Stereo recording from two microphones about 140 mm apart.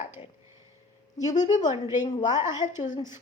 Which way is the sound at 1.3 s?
60° left (ahead or behind).